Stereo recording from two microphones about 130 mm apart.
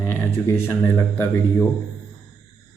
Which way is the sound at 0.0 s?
15° left (ahead or behind).